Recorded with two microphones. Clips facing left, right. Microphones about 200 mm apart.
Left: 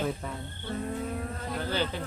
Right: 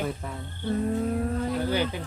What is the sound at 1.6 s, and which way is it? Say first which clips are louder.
Speech: right 2 dB; 15° right (ahead or behind).